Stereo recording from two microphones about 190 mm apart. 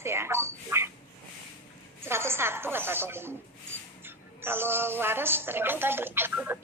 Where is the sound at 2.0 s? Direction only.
15° right (ahead or behind).